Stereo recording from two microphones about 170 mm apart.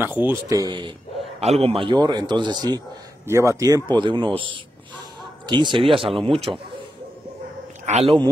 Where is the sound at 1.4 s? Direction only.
35° right (ahead or behind).